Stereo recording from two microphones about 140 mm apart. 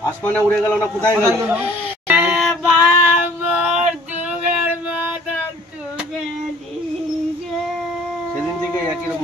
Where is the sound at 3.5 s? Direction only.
5° right (ahead or behind).